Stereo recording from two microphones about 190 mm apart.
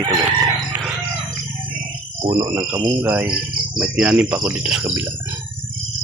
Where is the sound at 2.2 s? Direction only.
15° right (ahead or behind).